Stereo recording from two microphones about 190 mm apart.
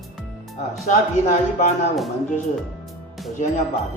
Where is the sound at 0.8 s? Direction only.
35° left (ahead or behind).